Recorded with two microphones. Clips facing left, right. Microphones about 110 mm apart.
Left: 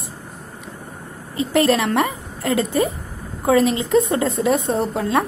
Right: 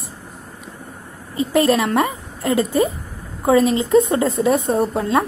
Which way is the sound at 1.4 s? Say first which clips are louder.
Right 1 dB; 25° right (ahead or behind).